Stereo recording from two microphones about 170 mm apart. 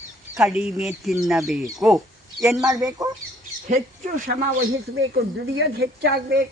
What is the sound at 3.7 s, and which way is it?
Speech, 50° right (ahead or behind).